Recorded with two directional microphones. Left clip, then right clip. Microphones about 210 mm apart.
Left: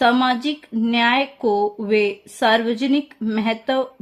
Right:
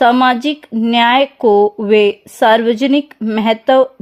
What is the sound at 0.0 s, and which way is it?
Speech, 30° right (ahead or behind).